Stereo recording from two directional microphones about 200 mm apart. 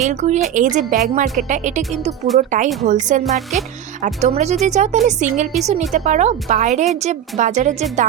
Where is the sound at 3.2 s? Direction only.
Centre (ahead or behind).